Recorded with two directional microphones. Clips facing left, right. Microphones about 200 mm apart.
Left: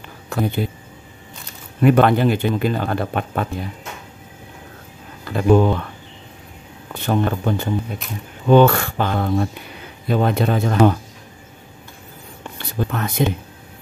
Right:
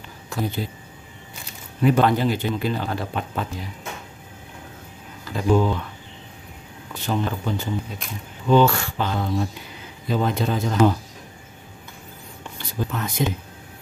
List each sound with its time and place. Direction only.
0.3 s speech: 60° left (ahead or behind)
1.8 s speech: 60° left (ahead or behind)
5.2 s speech: 60° left (ahead or behind)
6.9 s speech: 55° left (ahead or behind)
12.5 s a sound: 60° left (ahead or behind)